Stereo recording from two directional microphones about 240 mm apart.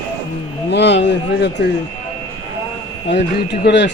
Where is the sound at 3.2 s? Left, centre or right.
Left.